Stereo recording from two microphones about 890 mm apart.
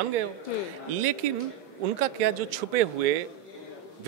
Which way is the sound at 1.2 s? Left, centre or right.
Right.